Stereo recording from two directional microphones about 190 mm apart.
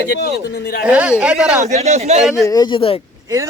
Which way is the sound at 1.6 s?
35° right (ahead or behind).